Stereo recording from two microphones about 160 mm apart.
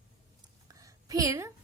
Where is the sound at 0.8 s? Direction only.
20° right (ahead or behind).